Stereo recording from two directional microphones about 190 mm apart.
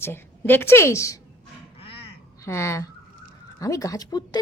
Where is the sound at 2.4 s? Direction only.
15° left (ahead or behind).